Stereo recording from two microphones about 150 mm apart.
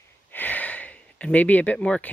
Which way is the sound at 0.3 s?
10° left (ahead or behind).